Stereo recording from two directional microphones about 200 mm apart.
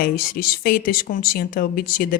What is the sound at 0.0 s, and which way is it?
A woman's voice, 45° left (ahead or behind).